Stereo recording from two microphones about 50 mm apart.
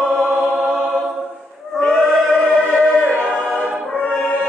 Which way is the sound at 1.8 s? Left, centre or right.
Centre.